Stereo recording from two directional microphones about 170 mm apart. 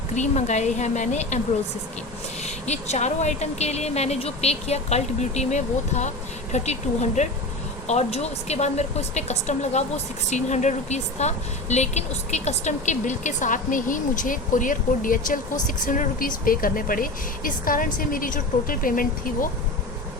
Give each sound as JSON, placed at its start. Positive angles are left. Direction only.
{"t": 0.1, "sound": "speech", "side_deg": 45}
{"t": 2.4, "sound": "speech", "side_deg": 40}